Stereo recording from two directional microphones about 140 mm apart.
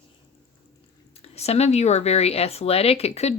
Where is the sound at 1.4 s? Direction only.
50° left (ahead or behind).